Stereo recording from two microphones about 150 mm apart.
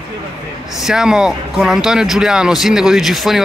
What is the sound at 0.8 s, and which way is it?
Speech, 5° right (ahead or behind).